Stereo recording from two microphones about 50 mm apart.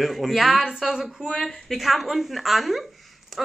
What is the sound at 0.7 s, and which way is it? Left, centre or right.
Speech, centre.